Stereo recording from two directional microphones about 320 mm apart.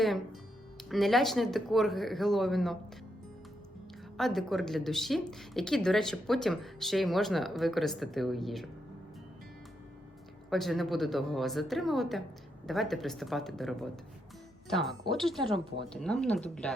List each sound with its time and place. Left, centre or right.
0.8 s speech: centre
4.2 s speech: centre
10.5 s speech: centre